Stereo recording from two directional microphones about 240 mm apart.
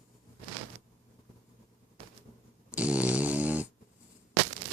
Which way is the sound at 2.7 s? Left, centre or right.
Centre.